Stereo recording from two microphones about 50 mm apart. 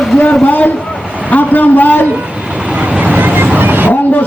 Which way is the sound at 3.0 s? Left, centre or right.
Right.